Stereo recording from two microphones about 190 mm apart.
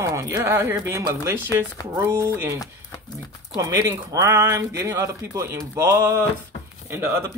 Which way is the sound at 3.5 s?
20° right (ahead or behind).